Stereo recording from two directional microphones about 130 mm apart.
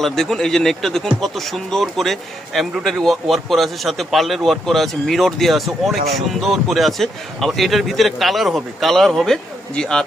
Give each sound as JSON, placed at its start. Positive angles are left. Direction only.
{"t": 0.0, "sound": "a man's voice", "side_deg": 5}